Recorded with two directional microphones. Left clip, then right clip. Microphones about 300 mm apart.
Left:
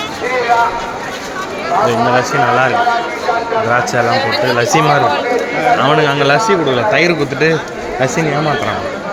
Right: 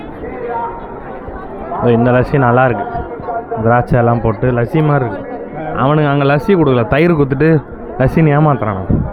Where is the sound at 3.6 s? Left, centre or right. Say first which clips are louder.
Right 4 dB; centre.